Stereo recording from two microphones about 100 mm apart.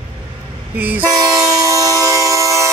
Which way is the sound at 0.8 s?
15° right (ahead or behind).